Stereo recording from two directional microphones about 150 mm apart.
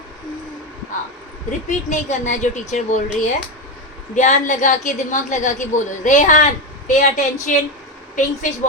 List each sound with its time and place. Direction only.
1.5 s speech: 55° left (ahead or behind)
4.1 s a woman's voice: 55° left (ahead or behind)